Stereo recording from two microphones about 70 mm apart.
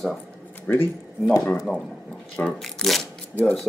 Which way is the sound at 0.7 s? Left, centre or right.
Left.